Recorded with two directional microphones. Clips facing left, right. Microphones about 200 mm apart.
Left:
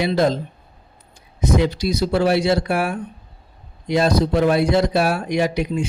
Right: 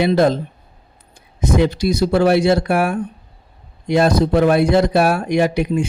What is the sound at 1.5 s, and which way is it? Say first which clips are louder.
Speech: right 4 dB; 55° right (ahead or behind).